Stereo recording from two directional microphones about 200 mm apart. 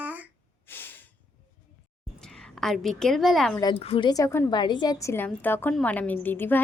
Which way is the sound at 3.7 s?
30° left (ahead or behind).